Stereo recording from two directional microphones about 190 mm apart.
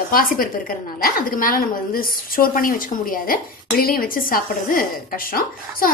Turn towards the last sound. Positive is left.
turn(degrees=50)  # may be behind; listen again after turning